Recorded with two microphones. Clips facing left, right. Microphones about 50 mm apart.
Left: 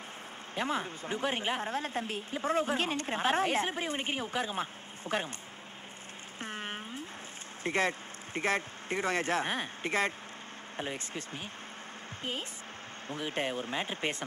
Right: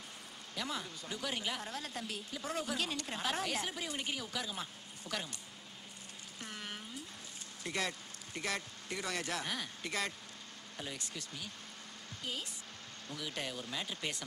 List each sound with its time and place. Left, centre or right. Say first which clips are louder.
0.6 s a woman's voice: left 8 dB; left
6.4 s a sound: left 7 dB; left
7.6 s a woman's voice: left 8 dB; left